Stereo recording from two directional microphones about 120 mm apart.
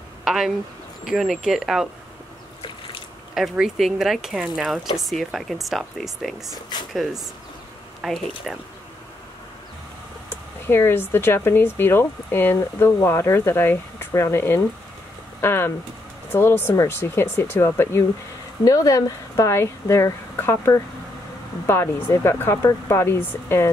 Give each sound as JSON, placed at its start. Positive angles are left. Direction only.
{"t": 0.2, "sound": "a sound", "side_deg": -5}
{"t": 1.0, "sound": "speech", "side_deg": 0}
{"t": 3.3, "sound": "speech", "side_deg": -5}
{"t": 6.7, "sound": "speech", "side_deg": 35}
{"t": 8.0, "sound": "speech", "side_deg": 0}
{"t": 10.7, "sound": "speech", "side_deg": 20}